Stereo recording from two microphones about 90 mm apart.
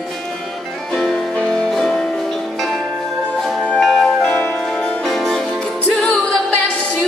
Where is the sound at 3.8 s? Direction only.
5° left (ahead or behind).